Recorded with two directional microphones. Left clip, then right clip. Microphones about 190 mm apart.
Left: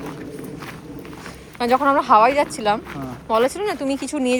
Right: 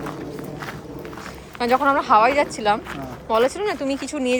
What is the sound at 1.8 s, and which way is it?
Speech, 5° right (ahead or behind).